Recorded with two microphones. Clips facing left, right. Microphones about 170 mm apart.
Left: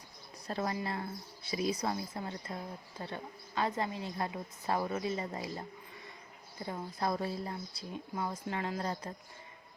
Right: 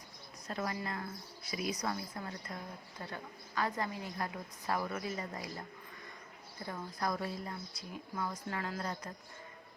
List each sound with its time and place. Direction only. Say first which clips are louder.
0.4 s a woman's voice: left 3 dB; 30° left (ahead or behind)
6.7 s a woman's voice: left 2 dB; 25° left (ahead or behind)